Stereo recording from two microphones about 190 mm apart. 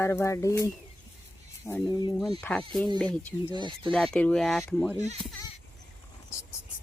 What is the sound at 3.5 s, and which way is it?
Speech, 25° right (ahead or behind).